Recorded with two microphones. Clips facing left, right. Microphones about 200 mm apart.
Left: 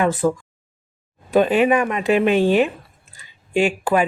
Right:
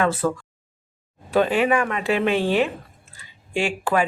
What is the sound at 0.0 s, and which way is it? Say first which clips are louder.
Speech: left 3 dB; 15° left (ahead or behind).